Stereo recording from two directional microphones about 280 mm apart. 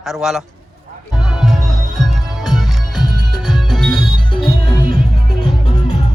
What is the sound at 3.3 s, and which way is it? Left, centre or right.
Music, centre.